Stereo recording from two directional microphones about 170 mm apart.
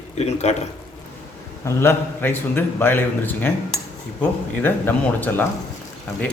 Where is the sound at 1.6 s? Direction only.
15° left (ahead or behind).